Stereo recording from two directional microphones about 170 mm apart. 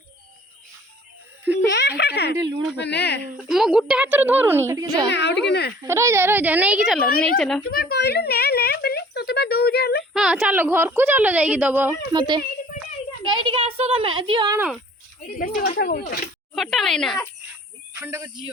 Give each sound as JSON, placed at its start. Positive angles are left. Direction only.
{"t": 1.7, "sound": "speech", "side_deg": 85}
{"t": 3.5, "sound": "a woman's voice", "side_deg": -5}
{"t": 5.0, "sound": "a woman's voice", "side_deg": 90}
{"t": 5.5, "sound": "speech", "side_deg": 75}
{"t": 5.8, "sound": "a woman's voice", "side_deg": -15}
{"t": 7.7, "sound": "a sound", "side_deg": 65}
{"t": 10.1, "sound": "a woman's voice", "side_deg": 0}
{"t": 12.1, "sound": "a child's voice", "side_deg": -25}
{"t": 15.4, "sound": "speech", "side_deg": 55}
{"t": 16.6, "sound": "speech", "side_deg": 0}
{"t": 17.9, "sound": "speech", "side_deg": -15}